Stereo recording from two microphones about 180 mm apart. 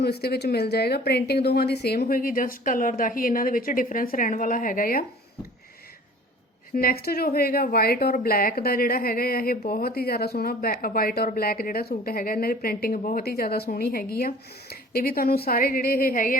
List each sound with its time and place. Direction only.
0.0 s a woman's voice: 60° left (ahead or behind)
6.7 s speech: 55° left (ahead or behind)